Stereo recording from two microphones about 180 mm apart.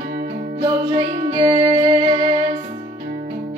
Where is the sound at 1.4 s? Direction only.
35° right (ahead or behind).